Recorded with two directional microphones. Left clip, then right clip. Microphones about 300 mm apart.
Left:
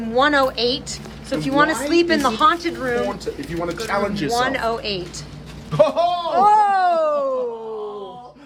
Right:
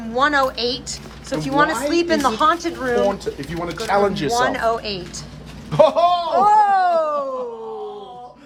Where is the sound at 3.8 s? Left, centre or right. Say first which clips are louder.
Right 6 dB; right.